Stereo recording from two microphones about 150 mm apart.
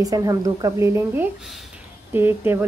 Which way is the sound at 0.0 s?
20° right (ahead or behind).